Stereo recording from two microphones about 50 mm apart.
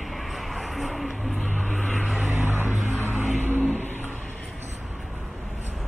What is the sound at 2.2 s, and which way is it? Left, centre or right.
Vehicle, right.